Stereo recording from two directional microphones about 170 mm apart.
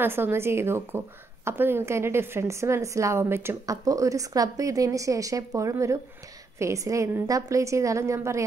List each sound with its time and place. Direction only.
0.0 s speech: 15° right (ahead or behind)